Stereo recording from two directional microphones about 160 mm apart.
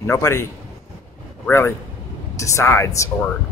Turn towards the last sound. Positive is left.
turn(degrees=20)  # may be behind; listen again after turning